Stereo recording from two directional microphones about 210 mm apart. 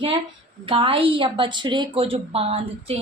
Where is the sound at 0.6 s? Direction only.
25° right (ahead or behind).